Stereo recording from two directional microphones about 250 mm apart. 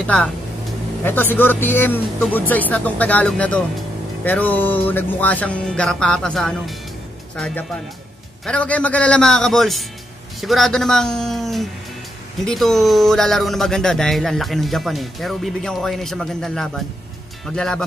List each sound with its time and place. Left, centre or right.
0.0 s speech: centre